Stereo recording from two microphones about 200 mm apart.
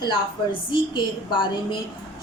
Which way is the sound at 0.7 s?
25° left (ahead or behind).